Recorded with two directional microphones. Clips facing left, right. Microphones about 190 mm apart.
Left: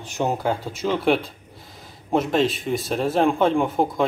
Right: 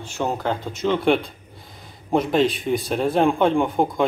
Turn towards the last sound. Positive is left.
turn(degrees=0)  # may be behind; listen again after turning